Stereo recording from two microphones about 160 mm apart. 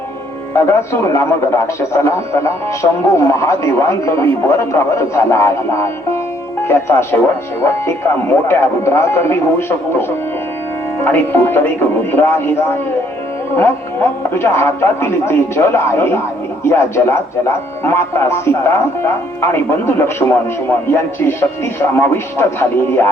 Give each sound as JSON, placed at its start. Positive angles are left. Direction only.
{"t": 0.5, "sound": "speech", "side_deg": 15}